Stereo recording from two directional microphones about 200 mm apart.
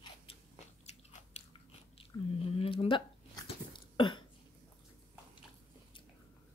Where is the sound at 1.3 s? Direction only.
35° left (ahead or behind).